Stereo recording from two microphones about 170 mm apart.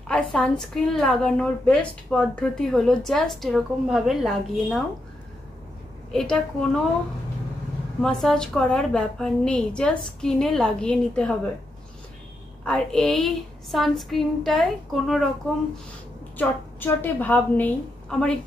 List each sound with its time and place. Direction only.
0.1 s a woman's voice: 5° left (ahead or behind)
6.1 s a woman's voice: 5° left (ahead or behind)
8.0 s a woman's voice: 5° left (ahead or behind)
12.6 s a woman's voice: 5° left (ahead or behind)
16.3 s a woman's voice: 10° left (ahead or behind)